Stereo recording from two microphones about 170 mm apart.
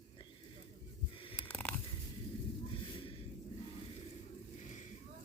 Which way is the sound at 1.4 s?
10° left (ahead or behind).